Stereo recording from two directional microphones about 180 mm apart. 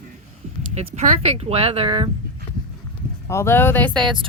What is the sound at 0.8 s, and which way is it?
Speech, 40° right (ahead or behind).